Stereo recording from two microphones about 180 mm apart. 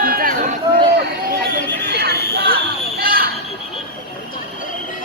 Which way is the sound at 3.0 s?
55° right (ahead or behind).